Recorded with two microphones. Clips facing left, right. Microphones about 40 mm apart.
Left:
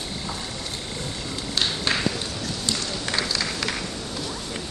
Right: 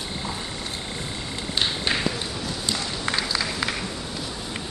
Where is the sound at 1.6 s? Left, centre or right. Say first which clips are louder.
Even; centre.